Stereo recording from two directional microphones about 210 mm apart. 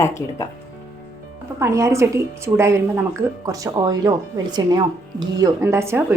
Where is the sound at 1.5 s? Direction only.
15° right (ahead or behind).